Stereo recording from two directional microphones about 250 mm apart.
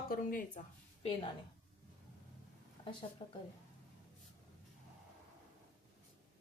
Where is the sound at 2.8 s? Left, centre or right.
Centre.